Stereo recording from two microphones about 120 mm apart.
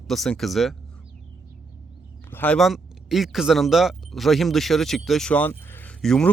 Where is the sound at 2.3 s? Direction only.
15° left (ahead or behind).